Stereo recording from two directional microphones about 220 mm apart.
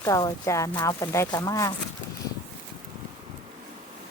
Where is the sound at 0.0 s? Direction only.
15° left (ahead or behind).